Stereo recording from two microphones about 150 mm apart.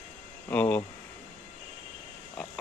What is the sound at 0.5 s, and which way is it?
Speech, 10° left (ahead or behind).